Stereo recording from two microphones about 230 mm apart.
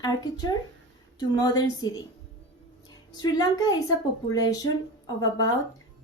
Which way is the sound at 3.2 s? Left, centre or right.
Centre.